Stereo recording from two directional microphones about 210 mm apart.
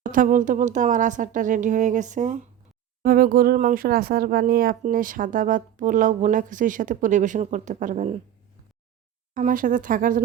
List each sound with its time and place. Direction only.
0.0 s speech: 40° right (ahead or behind)
9.3 s speech: 40° right (ahead or behind)